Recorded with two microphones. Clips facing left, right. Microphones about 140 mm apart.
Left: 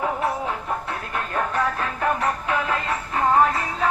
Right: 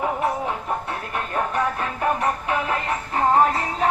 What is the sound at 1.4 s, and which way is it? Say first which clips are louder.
Music: even; 20° right (ahead or behind).